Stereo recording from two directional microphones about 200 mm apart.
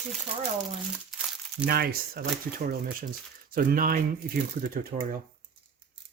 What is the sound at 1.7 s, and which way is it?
Speech, 50° right (ahead or behind).